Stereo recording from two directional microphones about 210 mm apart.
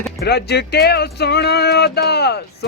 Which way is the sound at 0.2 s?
50° left (ahead or behind).